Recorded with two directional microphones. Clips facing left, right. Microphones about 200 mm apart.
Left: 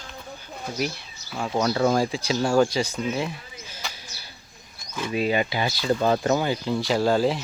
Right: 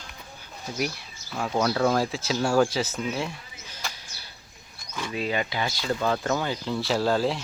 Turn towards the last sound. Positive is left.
turn(degrees=0)  # may be behind; listen again after turning